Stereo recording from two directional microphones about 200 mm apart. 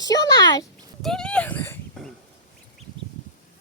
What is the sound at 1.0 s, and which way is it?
Speech, 5° left (ahead or behind).